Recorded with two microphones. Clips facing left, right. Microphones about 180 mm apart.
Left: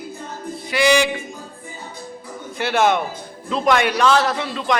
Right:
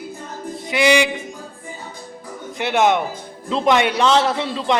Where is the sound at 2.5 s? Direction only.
20° right (ahead or behind).